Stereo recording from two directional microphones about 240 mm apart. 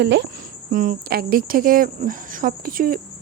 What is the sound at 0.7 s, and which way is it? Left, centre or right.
Speech, right.